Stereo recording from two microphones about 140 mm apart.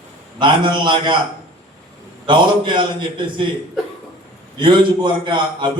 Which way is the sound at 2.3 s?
35° right (ahead or behind).